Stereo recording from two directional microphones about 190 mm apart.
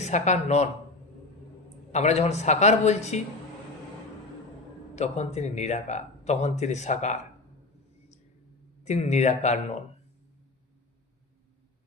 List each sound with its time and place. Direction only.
0.0 s speech: 35° left (ahead or behind)
1.9 s speech: 35° left (ahead or behind)
4.9 s speech: 35° left (ahead or behind)
8.8 s speech: 35° left (ahead or behind)